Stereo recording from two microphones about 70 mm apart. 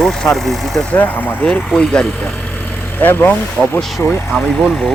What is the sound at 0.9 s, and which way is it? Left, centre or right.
Speech, centre.